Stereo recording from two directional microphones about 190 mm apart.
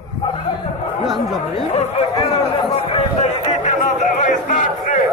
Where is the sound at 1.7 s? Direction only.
35° left (ahead or behind).